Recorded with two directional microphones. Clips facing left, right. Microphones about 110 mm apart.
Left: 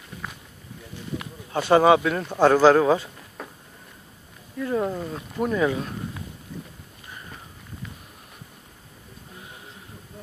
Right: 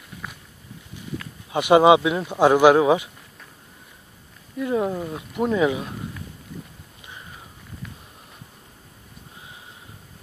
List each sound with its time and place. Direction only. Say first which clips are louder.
1.5 s speech: right 2 dB; 15° right (ahead or behind)
4.6 s wild animals: right 2 dB; 15° right (ahead or behind)